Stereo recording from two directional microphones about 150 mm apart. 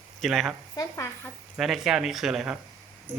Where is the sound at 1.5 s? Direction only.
Centre (ahead or behind).